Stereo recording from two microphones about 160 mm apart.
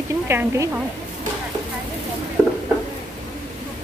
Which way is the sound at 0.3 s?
15° right (ahead or behind).